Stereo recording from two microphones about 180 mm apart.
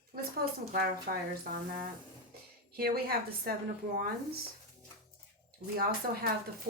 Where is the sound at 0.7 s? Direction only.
55° right (ahead or behind).